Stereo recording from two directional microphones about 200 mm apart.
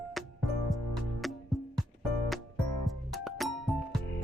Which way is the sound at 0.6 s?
Centre (ahead or behind).